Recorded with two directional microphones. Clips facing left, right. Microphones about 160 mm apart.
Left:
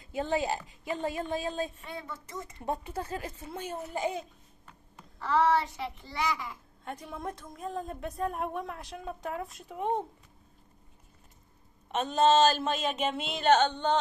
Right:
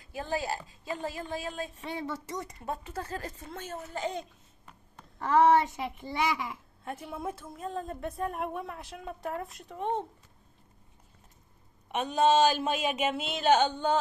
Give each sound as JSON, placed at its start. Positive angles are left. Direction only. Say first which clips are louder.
{"t": 0.0, "sound": "speech", "louder": "left 3 dB", "side_deg": 20}
{"t": 1.8, "sound": "speech", "louder": "right 5 dB", "side_deg": -90}
{"t": 2.6, "sound": "speech", "louder": "left 2 dB", "side_deg": 15}
{"t": 5.2, "sound": "a child's voice", "louder": "right 4 dB", "side_deg": -50}
{"t": 6.8, "sound": "a woman's voice", "louder": "right 1 dB", "side_deg": -5}
{"t": 11.9, "sound": "speech", "louder": "left 1 dB", "side_deg": -10}